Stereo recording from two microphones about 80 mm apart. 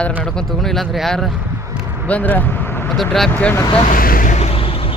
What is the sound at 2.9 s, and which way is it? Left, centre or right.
Speech, centre.